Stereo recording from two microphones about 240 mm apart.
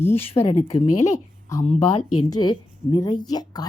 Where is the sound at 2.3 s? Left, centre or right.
Centre.